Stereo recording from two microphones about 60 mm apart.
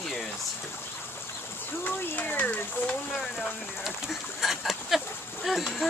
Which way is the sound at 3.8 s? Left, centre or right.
Centre.